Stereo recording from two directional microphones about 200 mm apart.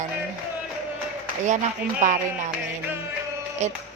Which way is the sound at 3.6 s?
35° right (ahead or behind).